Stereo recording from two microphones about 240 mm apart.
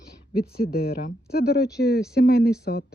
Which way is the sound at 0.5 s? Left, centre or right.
Left.